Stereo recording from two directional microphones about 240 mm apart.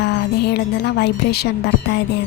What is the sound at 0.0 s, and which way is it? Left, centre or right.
A woman's voice, left.